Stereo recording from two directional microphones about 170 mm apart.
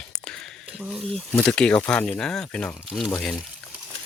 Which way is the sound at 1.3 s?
5° left (ahead or behind).